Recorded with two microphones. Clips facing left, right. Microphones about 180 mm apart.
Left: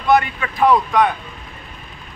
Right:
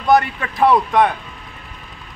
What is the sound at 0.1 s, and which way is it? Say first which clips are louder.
Speech: right 1 dB; 40° right (ahead or behind).